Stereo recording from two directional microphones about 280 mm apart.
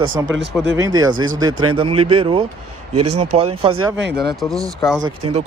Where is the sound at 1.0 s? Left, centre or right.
Right.